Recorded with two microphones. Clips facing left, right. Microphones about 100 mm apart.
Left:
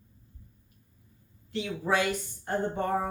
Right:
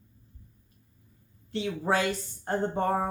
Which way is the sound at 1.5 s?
35° right (ahead or behind).